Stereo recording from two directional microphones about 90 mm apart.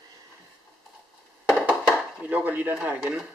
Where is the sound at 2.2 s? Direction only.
20° right (ahead or behind).